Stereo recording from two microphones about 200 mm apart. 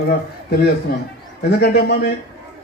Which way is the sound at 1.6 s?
50° left (ahead or behind).